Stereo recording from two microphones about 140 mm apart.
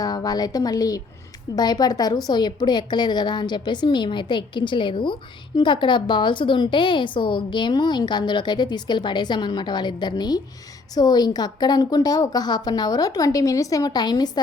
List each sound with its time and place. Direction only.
0.0 s a woman's voice: 30° left (ahead or behind)